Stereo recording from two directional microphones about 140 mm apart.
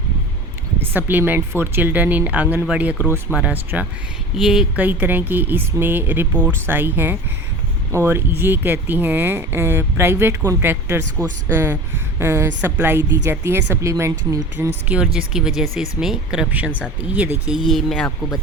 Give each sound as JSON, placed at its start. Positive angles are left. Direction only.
{"t": 0.8, "sound": "speech", "side_deg": -15}
{"t": 15.0, "sound": "speech", "side_deg": -5}
{"t": 17.7, "sound": "speech", "side_deg": 0}